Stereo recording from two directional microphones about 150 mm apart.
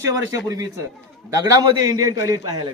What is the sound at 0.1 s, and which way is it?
A man's voice, 25° right (ahead or behind).